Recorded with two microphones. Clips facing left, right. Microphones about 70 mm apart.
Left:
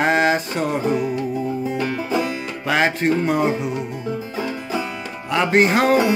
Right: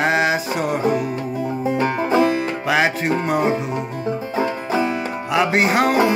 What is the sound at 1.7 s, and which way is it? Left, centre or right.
Music, right.